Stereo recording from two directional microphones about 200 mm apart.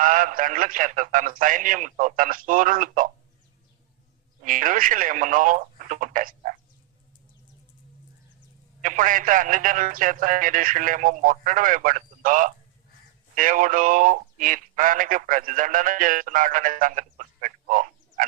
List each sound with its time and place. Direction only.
0.0 s a man's voice: 40° right (ahead or behind)
4.4 s a man's voice: 40° right (ahead or behind)
8.8 s a man's voice: 40° right (ahead or behind)